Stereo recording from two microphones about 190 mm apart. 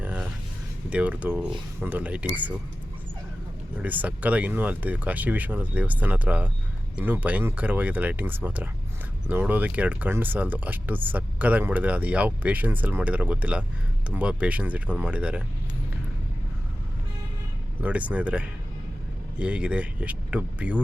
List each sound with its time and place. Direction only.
0.0 s a sound: 10° right (ahead or behind)
0.9 s speech: 5° right (ahead or behind)
3.8 s speech: 10° right (ahead or behind)
17.8 s speech: 5° right (ahead or behind)